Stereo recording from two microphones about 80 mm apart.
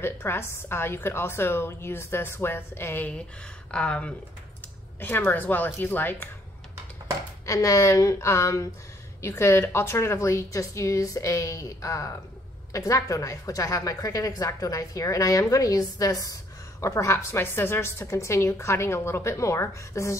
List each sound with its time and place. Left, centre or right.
0.0 s a woman's voice: left
3.7 s speech: centre
5.0 s speech: left
7.4 s a woman's voice: left
16.8 s a woman's voice: left